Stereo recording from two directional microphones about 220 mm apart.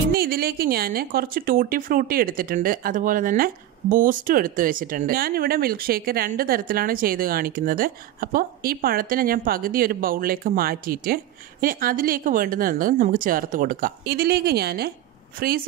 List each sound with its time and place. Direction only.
0.1 s a woman's voice: 45° right (ahead or behind)